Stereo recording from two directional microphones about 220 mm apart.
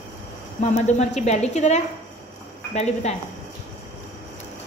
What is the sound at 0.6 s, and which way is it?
A woman's voice, 30° left (ahead or behind).